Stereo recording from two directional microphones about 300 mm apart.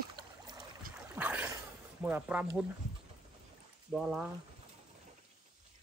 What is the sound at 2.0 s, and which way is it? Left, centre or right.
Speech, centre.